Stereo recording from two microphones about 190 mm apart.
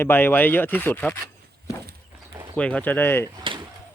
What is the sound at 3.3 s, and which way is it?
Door, 25° right (ahead or behind).